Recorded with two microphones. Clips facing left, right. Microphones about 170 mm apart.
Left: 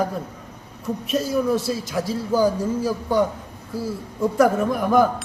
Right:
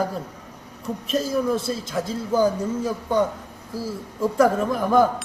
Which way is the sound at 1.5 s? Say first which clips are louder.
Left 2 dB; 25° right (ahead or behind).